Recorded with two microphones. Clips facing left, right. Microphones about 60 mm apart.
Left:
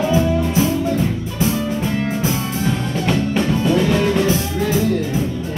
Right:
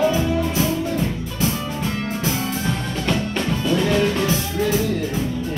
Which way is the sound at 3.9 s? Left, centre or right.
Centre.